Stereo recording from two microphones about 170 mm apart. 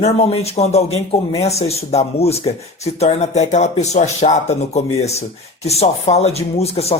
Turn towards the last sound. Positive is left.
turn(degrees=35)  # may be behind; listen again after turning